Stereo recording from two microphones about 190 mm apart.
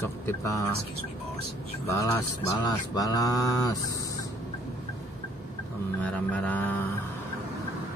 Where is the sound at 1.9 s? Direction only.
20° left (ahead or behind).